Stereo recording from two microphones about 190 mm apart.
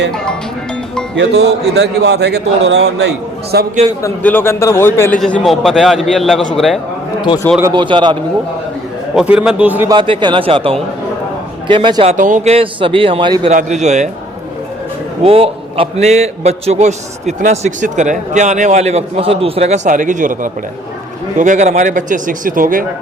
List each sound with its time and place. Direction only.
1.1 s a man's voice: 65° right (ahead or behind)
4.0 s a man's voice: 10° left (ahead or behind)
7.6 s speech: 25° right (ahead or behind)
9.1 s a man's voice: 5° right (ahead or behind)
9.9 s speech: 25° right (ahead or behind)
12.1 s speech: 40° right (ahead or behind); by 13.5 s 25° right (ahead or behind)
13.5 s a man's voice: 40° right (ahead or behind)
15.2 s a man's voice: 30° right (ahead or behind); by 22.9 s 45° right (ahead or behind)